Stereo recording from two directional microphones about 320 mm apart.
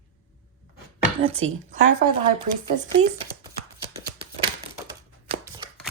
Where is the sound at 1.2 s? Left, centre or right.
Centre.